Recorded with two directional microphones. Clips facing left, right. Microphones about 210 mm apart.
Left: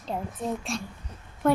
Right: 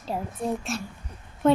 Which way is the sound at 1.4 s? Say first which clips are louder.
Right 3 dB; 20° right (ahead or behind).